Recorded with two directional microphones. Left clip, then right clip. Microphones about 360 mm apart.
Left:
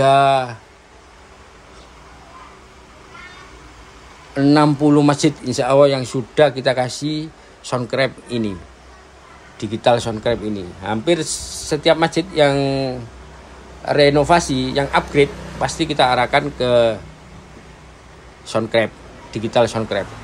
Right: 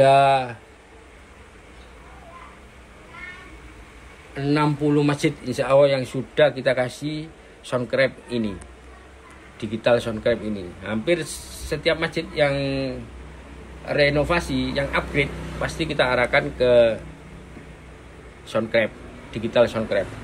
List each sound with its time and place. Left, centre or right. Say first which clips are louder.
0.0 s speech: left 2 dB; centre
4.4 s speech: left 8 dB; centre
9.6 s speech: left 4 dB; centre
12.5 s speech: left 6 dB; left
14.2 s speech: left 8 dB; centre
18.5 s speech: left 3 dB; centre